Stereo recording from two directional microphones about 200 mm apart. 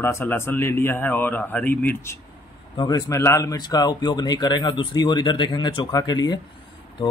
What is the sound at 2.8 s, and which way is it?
Speech, 20° left (ahead or behind).